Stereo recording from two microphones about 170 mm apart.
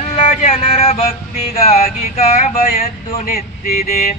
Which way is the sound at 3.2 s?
60° left (ahead or behind).